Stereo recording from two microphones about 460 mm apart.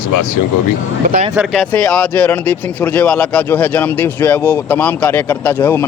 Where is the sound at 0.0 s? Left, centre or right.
Left.